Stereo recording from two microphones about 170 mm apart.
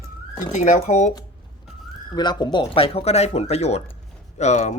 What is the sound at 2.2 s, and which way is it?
Speech, 25° left (ahead or behind).